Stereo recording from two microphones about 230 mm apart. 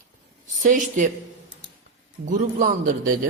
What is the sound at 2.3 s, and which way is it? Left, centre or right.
Speech, right.